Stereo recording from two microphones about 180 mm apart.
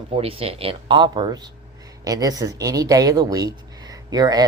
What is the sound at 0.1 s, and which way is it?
Speech, 30° right (ahead or behind).